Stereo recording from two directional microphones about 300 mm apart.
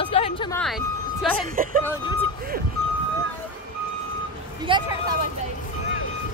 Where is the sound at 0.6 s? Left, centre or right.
Centre.